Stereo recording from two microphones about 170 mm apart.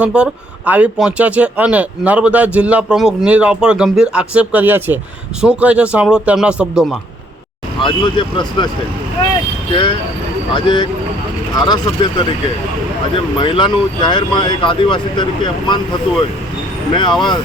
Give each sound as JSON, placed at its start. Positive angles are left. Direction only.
{"t": 0.0, "sound": "speech", "side_deg": -5}
{"t": 7.8, "sound": "speech", "side_deg": 30}
{"t": 9.7, "sound": "speech", "side_deg": 30}
{"t": 13.4, "sound": "speech", "side_deg": 25}
{"t": 16.9, "sound": "speech", "side_deg": 25}